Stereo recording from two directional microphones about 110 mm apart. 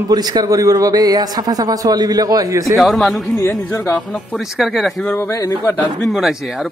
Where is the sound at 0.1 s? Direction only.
35° right (ahead or behind).